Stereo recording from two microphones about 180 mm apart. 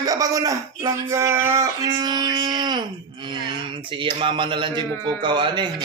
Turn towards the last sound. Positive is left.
turn(degrees=-25)  # may be behind; listen again after turning